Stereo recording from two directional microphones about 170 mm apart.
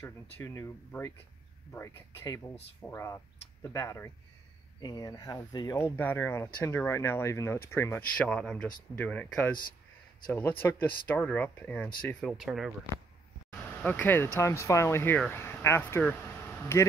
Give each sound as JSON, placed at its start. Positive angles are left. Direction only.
{"t": 0.0, "sound": "speech", "side_deg": 15}
{"t": 5.9, "sound": "speech", "side_deg": 10}
{"t": 10.6, "sound": "speech", "side_deg": 10}
{"t": 13.5, "sound": "speech", "side_deg": 10}